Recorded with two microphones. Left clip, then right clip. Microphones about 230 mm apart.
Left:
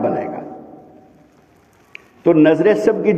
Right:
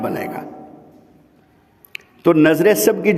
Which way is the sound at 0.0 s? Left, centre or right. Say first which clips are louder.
Left 4 dB; right.